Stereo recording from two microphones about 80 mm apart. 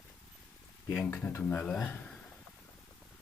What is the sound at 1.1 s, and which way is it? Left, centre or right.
Speech, left.